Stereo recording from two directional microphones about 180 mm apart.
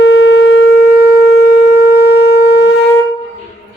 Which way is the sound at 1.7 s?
60° left (ahead or behind).